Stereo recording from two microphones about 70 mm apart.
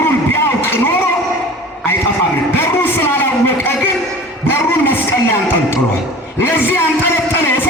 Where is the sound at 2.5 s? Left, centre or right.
Left.